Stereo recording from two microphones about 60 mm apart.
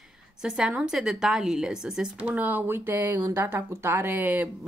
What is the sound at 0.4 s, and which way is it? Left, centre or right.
A woman's voice, centre.